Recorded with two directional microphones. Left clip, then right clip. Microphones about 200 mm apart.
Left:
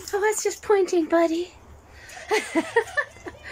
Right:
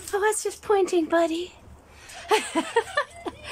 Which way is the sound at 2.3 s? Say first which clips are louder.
Even; centre (ahead or behind).